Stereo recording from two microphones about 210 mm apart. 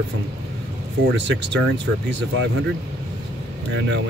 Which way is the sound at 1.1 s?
60° right (ahead or behind).